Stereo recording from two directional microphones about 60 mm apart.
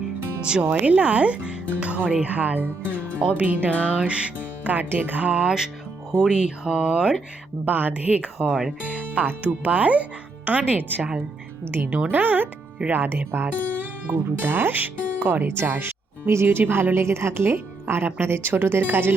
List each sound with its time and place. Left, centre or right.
0.6 s speech: right
3.7 s music: centre
4.0 s speech: right
7.6 s speech: right